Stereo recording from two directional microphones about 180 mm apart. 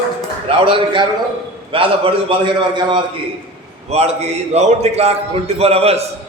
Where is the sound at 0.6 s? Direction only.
30° right (ahead or behind).